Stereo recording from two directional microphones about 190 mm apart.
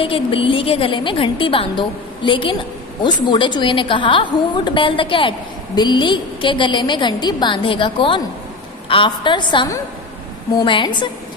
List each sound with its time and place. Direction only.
0.0 s a woman's voice: 30° left (ahead or behind)